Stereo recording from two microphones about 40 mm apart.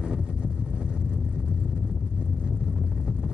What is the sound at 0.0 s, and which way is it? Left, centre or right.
Vehicle, right.